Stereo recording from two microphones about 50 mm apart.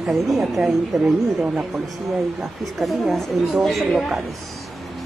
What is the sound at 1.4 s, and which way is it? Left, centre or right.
Speech, right.